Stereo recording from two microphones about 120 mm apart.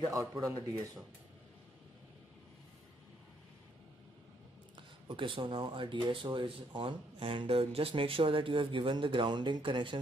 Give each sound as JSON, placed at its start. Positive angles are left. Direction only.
{"t": 0.0, "sound": "speech", "side_deg": -30}
{"t": 4.7, "sound": "speech", "side_deg": -45}